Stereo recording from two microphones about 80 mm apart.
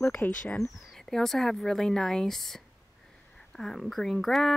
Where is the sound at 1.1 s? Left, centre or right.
Centre.